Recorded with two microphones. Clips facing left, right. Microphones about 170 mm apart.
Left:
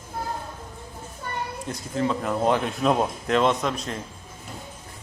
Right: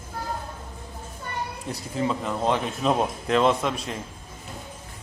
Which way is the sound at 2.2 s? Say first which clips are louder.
Left 2 dB; 5° left (ahead or behind).